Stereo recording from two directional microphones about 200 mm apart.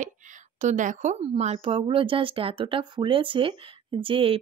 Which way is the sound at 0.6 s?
40° right (ahead or behind).